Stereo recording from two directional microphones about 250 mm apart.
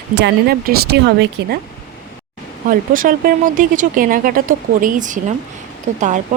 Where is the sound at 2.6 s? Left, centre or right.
Right.